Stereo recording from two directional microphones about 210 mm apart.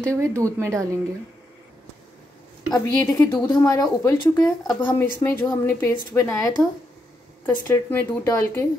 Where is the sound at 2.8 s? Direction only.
10° left (ahead or behind).